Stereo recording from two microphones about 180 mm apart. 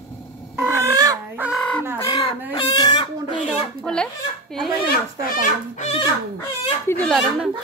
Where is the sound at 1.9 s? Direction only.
20° left (ahead or behind).